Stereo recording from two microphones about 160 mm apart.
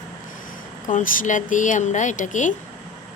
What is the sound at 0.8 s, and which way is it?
Speech, 55° left (ahead or behind).